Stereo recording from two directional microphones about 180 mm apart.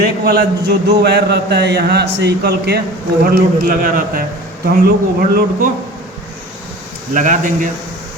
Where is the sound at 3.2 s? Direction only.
50° right (ahead or behind).